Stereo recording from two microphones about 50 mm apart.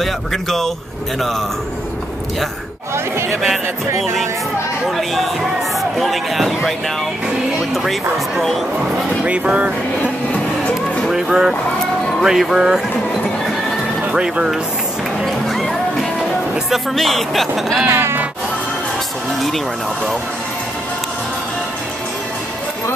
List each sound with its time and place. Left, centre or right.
0.0 s speech: centre
4.0 s speech: centre
7.7 s speech: centre
8.7 s speech: right
11.1 s speech: centre
14.1 s speech: centre
15.2 s music: centre
16.7 s speech: centre
17.8 s speech: right